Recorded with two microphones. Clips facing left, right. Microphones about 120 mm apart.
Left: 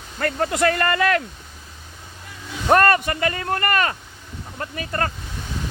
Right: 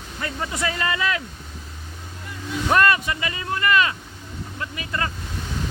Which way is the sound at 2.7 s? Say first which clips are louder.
Left 3 dB; 50° left (ahead or behind).